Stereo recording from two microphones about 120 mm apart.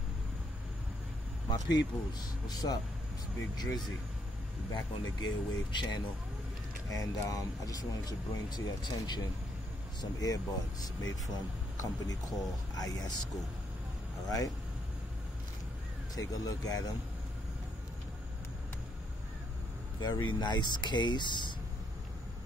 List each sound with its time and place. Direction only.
1.5 s speech: 35° left (ahead or behind)
6.9 s speech: 30° left (ahead or behind)
16.2 s speech: 30° left (ahead or behind)
20.0 s speech: 40° left (ahead or behind)